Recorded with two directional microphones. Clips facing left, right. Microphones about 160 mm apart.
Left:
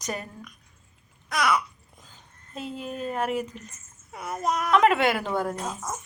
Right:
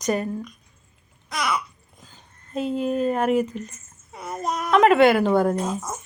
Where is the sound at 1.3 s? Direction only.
15° right (ahead or behind).